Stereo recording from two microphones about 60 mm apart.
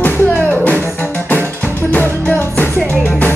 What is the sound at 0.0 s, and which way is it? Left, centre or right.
Music, left.